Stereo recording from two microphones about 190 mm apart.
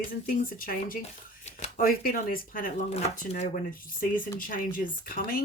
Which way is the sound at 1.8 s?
50° left (ahead or behind).